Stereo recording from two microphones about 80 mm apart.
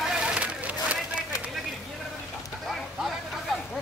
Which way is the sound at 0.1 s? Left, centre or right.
Centre.